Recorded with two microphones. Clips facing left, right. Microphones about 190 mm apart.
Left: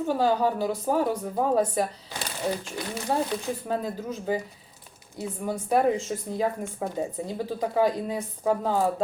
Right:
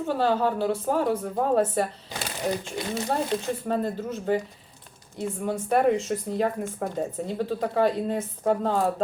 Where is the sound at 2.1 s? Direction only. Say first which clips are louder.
Right 1 dB; 20° right (ahead or behind).